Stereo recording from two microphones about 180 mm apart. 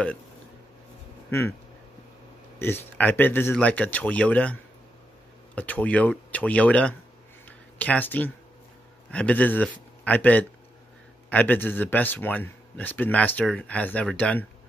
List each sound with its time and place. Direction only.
2.6 s speech: 10° left (ahead or behind)
7.4 s a sound: 10° left (ahead or behind)
9.1 s a man's voice: 5° left (ahead or behind)